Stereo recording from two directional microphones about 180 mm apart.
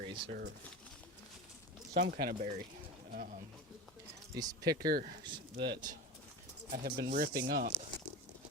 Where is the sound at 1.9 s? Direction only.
60° right (ahead or behind).